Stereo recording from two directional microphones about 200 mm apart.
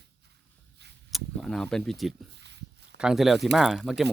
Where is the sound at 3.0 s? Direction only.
5° right (ahead or behind).